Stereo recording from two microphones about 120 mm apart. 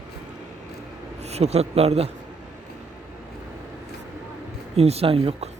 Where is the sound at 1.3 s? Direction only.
65° right (ahead or behind).